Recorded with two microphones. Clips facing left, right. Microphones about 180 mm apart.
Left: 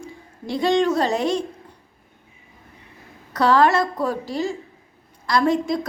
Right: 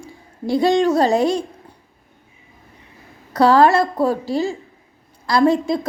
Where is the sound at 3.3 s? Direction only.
35° right (ahead or behind).